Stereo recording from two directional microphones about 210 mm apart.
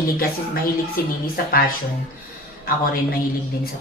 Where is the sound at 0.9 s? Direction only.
45° left (ahead or behind).